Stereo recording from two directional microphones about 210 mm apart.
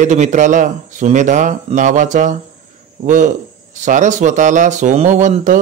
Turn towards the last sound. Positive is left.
turn(degrees=-35)  # may be behind; listen again after turning